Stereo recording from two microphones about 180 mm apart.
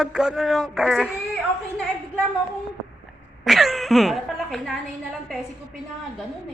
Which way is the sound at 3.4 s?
Centre (ahead or behind).